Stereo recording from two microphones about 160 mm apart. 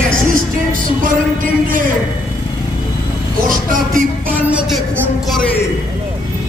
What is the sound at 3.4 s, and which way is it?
Speech, 55° right (ahead or behind).